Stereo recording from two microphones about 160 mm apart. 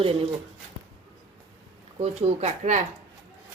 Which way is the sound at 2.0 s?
40° right (ahead or behind).